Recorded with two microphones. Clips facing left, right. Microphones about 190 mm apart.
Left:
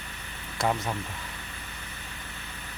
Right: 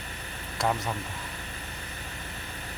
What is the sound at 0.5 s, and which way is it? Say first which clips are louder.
Speech: left 1 dB; centre (ahead or behind).